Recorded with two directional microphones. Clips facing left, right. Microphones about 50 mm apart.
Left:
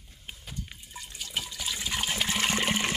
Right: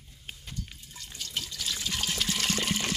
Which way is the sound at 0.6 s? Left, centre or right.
Centre.